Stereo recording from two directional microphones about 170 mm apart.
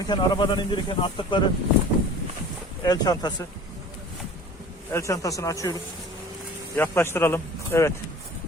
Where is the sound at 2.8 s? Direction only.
25° left (ahead or behind).